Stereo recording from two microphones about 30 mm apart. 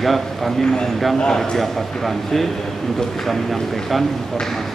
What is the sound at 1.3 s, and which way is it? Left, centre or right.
A man's voice, centre.